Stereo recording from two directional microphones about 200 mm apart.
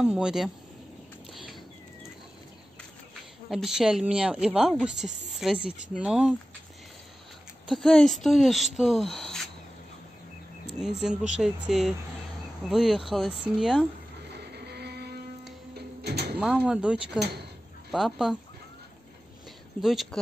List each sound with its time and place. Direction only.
0.0 s speech: 5° right (ahead or behind)
3.4 s speech: centre (ahead or behind)
5.3 s a sound: centre (ahead or behind)
5.9 s speech: 5° right (ahead or behind)
7.6 s speech: centre (ahead or behind)
10.7 s speech: centre (ahead or behind)
14.3 s music: 55° right (ahead or behind)
16.5 s speech: 5° right (ahead or behind)
17.2 s speech: 55° right (ahead or behind)
17.9 s speech: centre (ahead or behind)
19.8 s speech: centre (ahead or behind)